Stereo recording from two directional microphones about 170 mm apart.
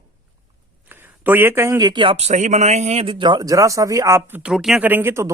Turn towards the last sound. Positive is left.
turn(degrees=-15)  # may be behind; listen again after turning